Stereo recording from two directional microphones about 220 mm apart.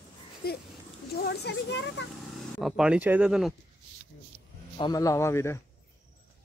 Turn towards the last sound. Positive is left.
turn(degrees=10)  # may be behind; listen again after turning